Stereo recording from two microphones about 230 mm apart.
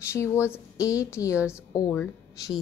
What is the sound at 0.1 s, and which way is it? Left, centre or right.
A woman's voice, centre.